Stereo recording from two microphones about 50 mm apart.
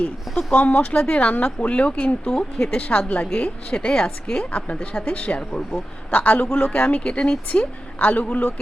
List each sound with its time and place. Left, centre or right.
0.3 s speech: centre
0.6 s a woman's voice: left
2.3 s speech: centre
2.9 s a woman's voice: left
7.9 s a man's voice: left